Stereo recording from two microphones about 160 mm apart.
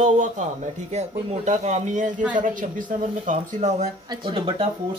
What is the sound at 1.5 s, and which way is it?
Speech, 50° right (ahead or behind).